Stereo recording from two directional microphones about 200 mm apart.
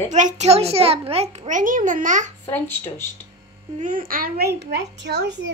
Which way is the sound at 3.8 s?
40° right (ahead or behind).